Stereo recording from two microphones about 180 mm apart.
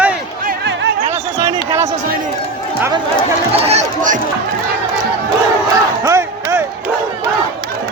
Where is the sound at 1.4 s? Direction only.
15° right (ahead or behind).